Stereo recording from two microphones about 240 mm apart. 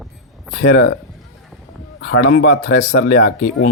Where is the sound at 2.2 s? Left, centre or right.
Left.